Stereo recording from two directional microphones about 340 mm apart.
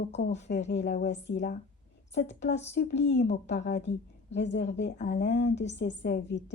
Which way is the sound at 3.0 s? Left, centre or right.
Left.